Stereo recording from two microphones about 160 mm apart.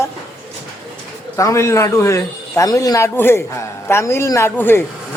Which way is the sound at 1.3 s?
20° left (ahead or behind).